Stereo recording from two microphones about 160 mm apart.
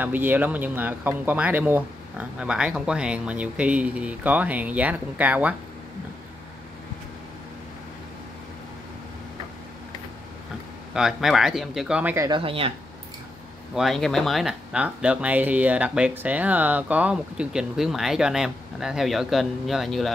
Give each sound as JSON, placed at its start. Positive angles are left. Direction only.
{"t": 0.0, "sound": "speech", "side_deg": -10}
{"t": 10.9, "sound": "speech", "side_deg": -5}
{"t": 12.3, "sound": "speech", "side_deg": -35}
{"t": 13.7, "sound": "speech", "side_deg": 0}